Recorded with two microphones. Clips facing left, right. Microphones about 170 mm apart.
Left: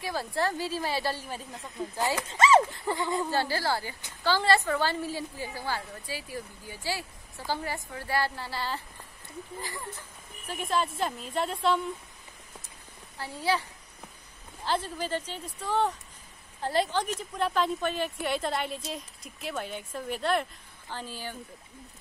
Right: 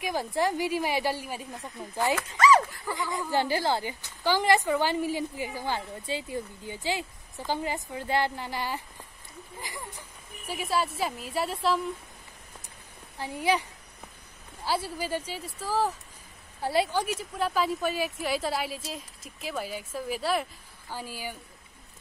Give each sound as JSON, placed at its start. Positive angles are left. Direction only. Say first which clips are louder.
{"t": 0.0, "sound": "a woman's voice", "louder": "right 2 dB", "side_deg": -15}
{"t": 2.2, "sound": "speech", "louder": "left 1 dB", "side_deg": 25}
{"t": 3.3, "sound": "a woman's voice", "louder": "right 2 dB", "side_deg": -15}
{"t": 13.2, "sound": "a woman's voice", "louder": "right 2 dB", "side_deg": -15}